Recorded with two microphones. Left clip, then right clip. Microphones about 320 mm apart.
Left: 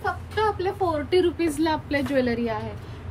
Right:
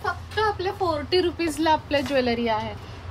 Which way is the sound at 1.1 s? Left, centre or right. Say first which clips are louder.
Left 1 dB; centre.